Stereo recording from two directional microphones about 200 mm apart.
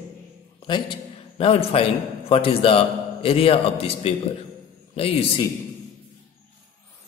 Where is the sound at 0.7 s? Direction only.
25° left (ahead or behind).